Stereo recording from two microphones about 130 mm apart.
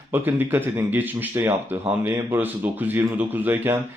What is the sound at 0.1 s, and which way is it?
Speech, 15° right (ahead or behind).